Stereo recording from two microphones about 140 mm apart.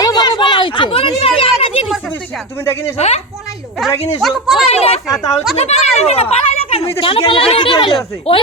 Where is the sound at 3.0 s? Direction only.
50° left (ahead or behind).